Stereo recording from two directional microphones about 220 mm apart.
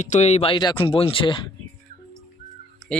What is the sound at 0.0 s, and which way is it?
Speech, 30° left (ahead or behind).